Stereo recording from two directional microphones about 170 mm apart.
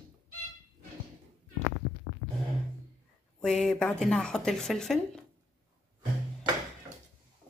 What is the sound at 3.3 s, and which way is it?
A woman's voice, 5° left (ahead or behind).